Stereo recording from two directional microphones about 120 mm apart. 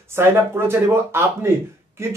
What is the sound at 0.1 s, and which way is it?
A man's voice, 20° right (ahead or behind).